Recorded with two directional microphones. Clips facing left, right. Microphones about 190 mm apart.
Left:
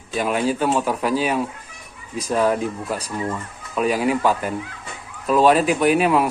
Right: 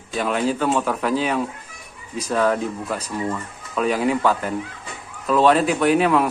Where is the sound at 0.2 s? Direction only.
10° left (ahead or behind).